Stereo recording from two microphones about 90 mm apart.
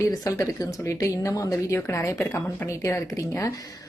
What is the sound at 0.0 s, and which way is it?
A woman's voice, 40° left (ahead or behind).